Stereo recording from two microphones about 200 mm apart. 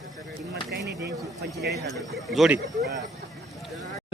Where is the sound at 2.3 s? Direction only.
Centre (ahead or behind).